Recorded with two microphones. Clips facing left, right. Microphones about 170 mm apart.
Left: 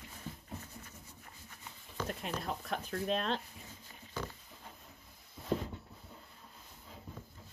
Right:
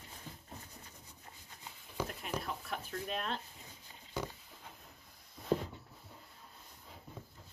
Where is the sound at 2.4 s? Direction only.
40° left (ahead or behind).